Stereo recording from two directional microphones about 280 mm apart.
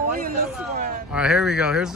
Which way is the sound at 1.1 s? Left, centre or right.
Centre.